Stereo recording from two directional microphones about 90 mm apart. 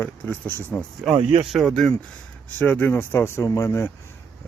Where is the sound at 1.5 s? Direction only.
5° left (ahead or behind).